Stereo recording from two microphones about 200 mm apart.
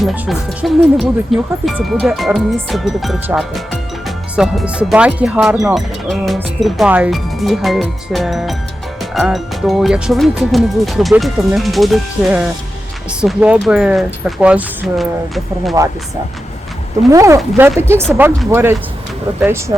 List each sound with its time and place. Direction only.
0.0 s speech: centre (ahead or behind)
15.8 s speech: 15° right (ahead or behind)
17.1 s speech: 15° right (ahead or behind)